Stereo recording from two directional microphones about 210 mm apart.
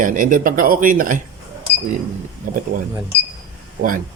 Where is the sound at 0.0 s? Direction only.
40° right (ahead or behind).